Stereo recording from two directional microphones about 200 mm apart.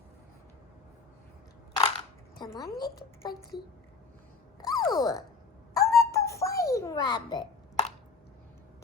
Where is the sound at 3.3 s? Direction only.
50° left (ahead or behind).